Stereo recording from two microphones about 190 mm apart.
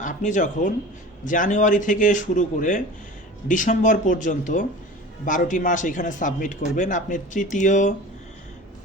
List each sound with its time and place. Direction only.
0.0 s speech: 40° left (ahead or behind)